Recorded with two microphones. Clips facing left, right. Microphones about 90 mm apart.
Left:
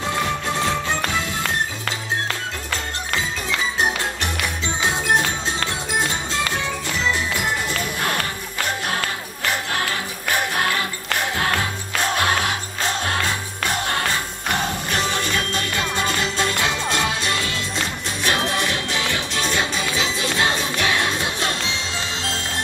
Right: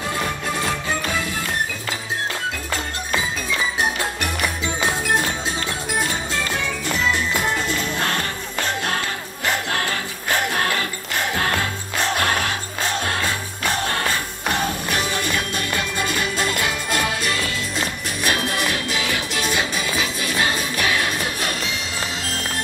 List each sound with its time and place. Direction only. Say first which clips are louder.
5.9 s music: right 1 dB; 20° left (ahead or behind)
16.0 s music: left 1 dB; 25° left (ahead or behind)
20.2 s music: left 1 dB; 25° left (ahead or behind)